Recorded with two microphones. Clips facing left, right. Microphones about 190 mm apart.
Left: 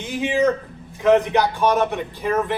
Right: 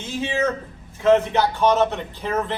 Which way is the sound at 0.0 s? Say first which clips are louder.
Left 4 dB; 15° left (ahead or behind).